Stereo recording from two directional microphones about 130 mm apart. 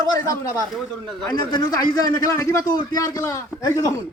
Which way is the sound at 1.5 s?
30° left (ahead or behind).